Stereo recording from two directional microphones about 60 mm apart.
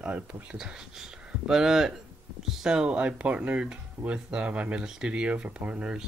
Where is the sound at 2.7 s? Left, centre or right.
Centre.